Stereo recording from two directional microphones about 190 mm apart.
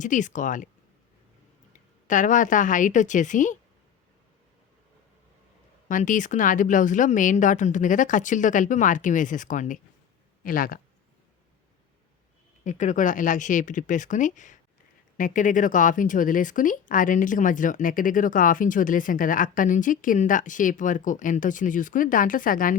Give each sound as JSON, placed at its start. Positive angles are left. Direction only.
{"t": 0.0, "sound": "speech", "side_deg": 40}
{"t": 2.0, "sound": "speech", "side_deg": 40}
{"t": 5.9, "sound": "speech", "side_deg": 40}
{"t": 12.6, "sound": "speech", "side_deg": 40}